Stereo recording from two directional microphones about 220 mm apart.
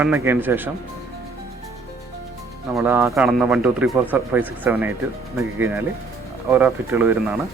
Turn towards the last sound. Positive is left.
turn(degrees=-10)  # may be behind; listen again after turning